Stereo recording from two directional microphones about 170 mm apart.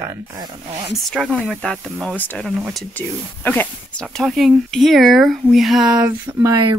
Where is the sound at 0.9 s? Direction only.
Centre (ahead or behind).